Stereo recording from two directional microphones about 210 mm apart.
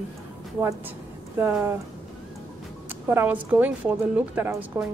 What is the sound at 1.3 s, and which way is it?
Speech, 10° right (ahead or behind).